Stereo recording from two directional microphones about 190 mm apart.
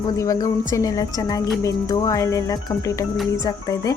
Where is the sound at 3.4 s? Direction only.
20° left (ahead or behind).